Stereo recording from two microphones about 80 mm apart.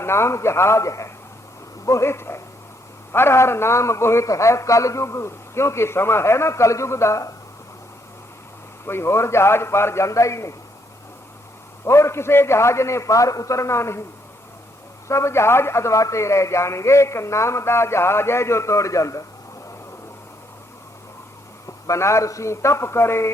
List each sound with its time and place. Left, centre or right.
0.0 s a man's voice: left
8.9 s a man's voice: left
11.9 s a man's voice: left
15.0 s a man's voice: left
21.8 s a man's voice: left